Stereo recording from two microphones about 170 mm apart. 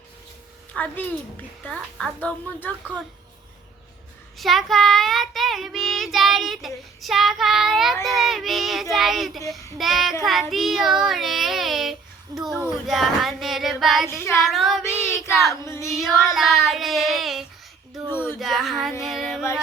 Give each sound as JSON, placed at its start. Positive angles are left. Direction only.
{"t": 0.7, "sound": "a child's voice", "side_deg": 10}
{"t": 4.4, "sound": "child singing", "side_deg": 0}
{"t": 15.4, "sound": "a woman's voice", "side_deg": 15}
{"t": 15.9, "sound": "child singing", "side_deg": 0}
{"t": 19.0, "sound": "music", "side_deg": 0}